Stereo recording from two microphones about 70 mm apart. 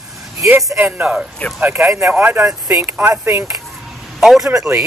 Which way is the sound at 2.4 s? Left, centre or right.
Right.